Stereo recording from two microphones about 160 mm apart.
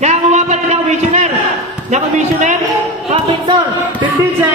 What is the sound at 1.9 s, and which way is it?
Speech, 45° right (ahead or behind).